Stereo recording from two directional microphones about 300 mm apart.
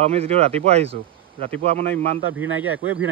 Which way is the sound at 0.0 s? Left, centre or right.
Right.